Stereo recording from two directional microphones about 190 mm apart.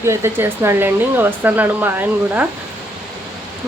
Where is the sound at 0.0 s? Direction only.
15° right (ahead or behind).